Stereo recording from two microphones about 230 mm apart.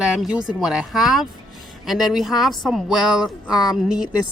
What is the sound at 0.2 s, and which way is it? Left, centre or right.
Speech, centre.